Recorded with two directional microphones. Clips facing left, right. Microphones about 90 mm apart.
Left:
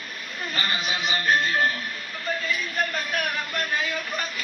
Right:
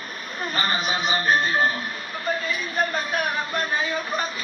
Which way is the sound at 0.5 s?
35° right (ahead or behind).